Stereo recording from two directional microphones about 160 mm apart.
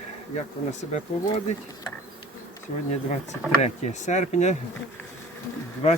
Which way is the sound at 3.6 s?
45° left (ahead or behind).